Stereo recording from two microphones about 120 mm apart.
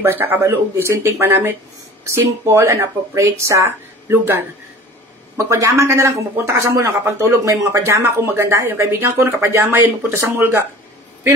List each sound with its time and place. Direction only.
0.0 s speech: 15° right (ahead or behind)
5.5 s speech: 25° right (ahead or behind)